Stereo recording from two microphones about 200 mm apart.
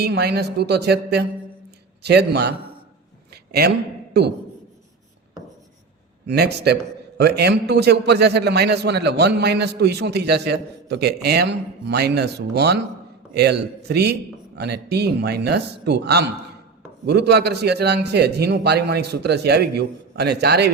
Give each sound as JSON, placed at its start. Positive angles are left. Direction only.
{"t": 0.0, "sound": "a man's voice", "side_deg": -55}
{"t": 4.1, "sound": "a man's voice", "side_deg": -55}
{"t": 6.2, "sound": "a man's voice", "side_deg": -55}